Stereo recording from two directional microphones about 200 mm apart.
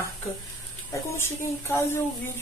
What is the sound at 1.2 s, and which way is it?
Speech, 10° left (ahead or behind).